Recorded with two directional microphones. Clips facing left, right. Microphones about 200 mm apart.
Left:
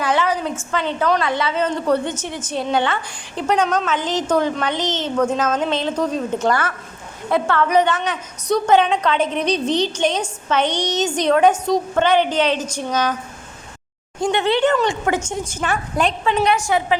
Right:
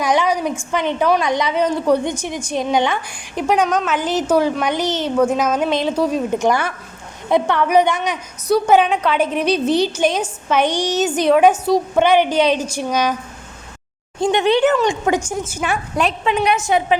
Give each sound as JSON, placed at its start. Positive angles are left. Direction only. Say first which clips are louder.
{"t": 0.0, "sound": "a woman's voice", "louder": "right 2 dB", "side_deg": -15}
{"t": 14.2, "sound": "a woman's voice", "louder": "right 3 dB", "side_deg": -20}
{"t": 16.2, "sound": "a woman's voice", "louder": "even", "side_deg": -15}